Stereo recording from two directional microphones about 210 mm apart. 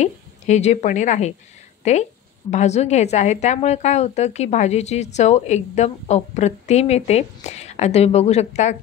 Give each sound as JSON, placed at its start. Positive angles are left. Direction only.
{"t": 0.0, "sound": "a woman's voice", "side_deg": 35}